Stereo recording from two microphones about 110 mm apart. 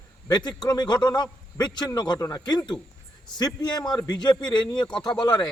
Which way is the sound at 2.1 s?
25° left (ahead or behind).